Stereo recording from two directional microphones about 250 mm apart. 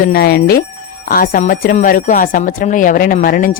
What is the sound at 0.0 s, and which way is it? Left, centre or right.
Speech, left.